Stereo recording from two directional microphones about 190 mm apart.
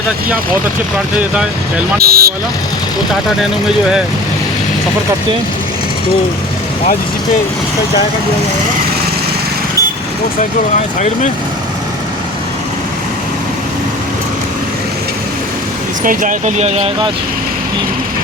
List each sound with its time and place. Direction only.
2.0 s speech: 55° right (ahead or behind)
16.0 s speech: 45° right (ahead or behind)